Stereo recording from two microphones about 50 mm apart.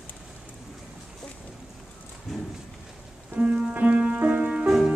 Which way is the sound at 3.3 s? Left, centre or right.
Right.